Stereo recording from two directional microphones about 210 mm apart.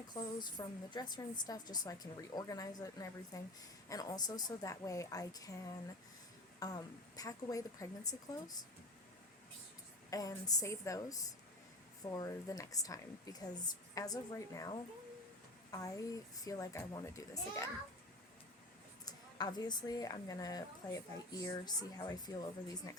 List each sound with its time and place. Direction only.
0.1 s a woman's voice: 20° left (ahead or behind)
6.6 s a woman's voice: 15° left (ahead or behind)
10.1 s a woman's voice: 15° left (ahead or behind)
19.0 s a woman's voice: 20° left (ahead or behind)